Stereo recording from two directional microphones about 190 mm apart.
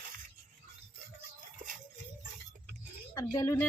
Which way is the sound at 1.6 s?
45° right (ahead or behind).